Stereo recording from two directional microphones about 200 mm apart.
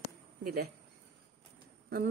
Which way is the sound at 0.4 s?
50° right (ahead or behind).